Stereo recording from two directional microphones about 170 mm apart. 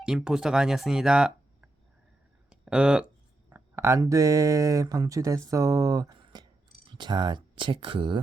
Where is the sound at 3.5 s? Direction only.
15° right (ahead or behind); by 8.1 s 30° right (ahead or behind).